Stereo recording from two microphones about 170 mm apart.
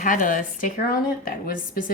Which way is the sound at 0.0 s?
55° left (ahead or behind).